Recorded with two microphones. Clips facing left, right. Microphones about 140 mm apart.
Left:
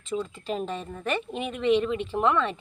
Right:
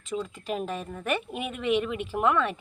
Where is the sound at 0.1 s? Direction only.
5° right (ahead or behind).